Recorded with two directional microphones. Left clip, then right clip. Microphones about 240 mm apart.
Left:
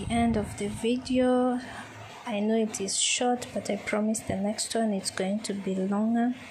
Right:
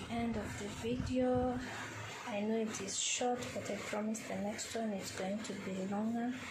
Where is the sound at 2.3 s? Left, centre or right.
Left.